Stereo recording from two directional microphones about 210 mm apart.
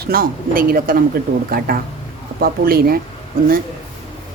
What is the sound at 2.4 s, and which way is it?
Speech, 45° right (ahead or behind).